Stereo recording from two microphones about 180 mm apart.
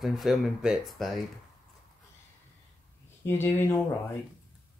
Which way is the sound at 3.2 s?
15° left (ahead or behind).